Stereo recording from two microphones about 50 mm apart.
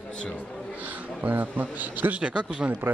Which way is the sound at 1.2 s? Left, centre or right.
Right.